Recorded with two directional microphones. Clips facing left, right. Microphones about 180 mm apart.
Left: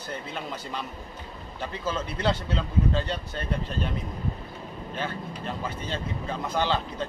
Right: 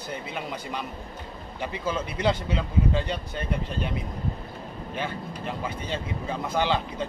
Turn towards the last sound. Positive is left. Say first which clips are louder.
# right 1 dB
turn(degrees=-10)  # may be behind; listen again after turning